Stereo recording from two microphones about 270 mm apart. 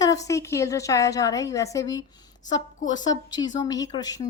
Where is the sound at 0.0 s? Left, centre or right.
Centre.